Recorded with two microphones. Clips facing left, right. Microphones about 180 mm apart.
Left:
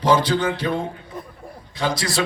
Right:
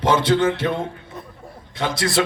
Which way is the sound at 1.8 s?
25° right (ahead or behind).